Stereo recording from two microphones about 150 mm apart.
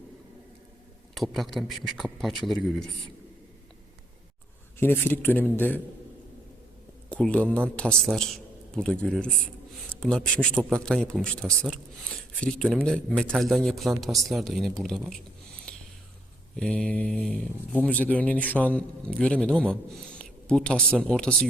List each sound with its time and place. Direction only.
1.1 s speech: centre (ahead or behind)
4.8 s speech: 15° left (ahead or behind)
7.1 s a man's voice: 5° left (ahead or behind)
16.6 s speech: 5° left (ahead or behind)